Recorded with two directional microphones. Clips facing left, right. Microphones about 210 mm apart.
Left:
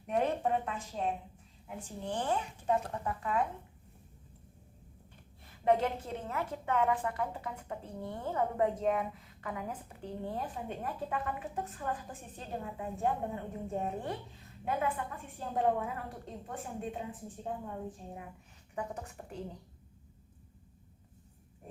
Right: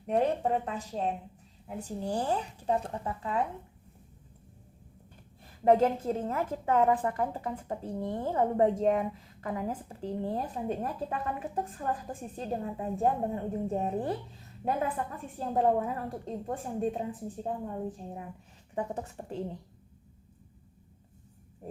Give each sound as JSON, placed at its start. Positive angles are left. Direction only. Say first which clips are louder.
{"t": 0.1, "sound": "speech", "louder": "right 3 dB", "side_deg": -35}
{"t": 5.8, "sound": "speech", "louder": "right 8 dB", "side_deg": -35}